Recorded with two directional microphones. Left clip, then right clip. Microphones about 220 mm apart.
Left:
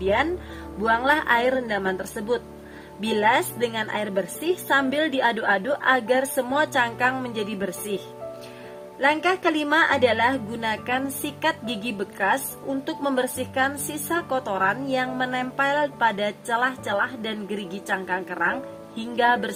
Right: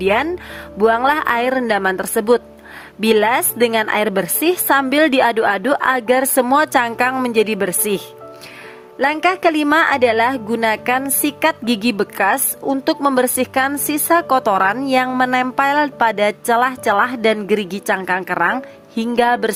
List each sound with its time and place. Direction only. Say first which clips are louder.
0.9 s a woman's voice: right 5 dB; 40° right (ahead or behind)